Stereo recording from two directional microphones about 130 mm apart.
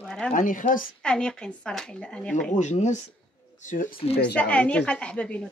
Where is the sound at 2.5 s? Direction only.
65° left (ahead or behind).